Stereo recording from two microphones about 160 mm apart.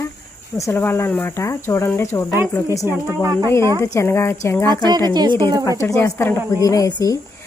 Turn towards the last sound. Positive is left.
turn(degrees=25)  # may be behind; listen again after turning